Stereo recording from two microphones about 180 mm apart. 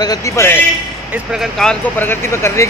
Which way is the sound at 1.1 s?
Centre (ahead or behind).